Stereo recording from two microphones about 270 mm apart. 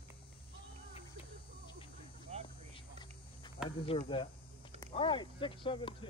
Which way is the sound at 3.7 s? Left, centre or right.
Centre.